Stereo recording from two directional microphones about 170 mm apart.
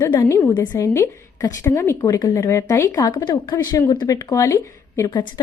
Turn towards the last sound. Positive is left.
turn(degrees=20)  # may be behind; listen again after turning